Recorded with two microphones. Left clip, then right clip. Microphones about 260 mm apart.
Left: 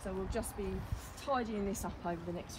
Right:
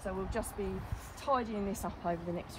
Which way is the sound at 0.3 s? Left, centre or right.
Right.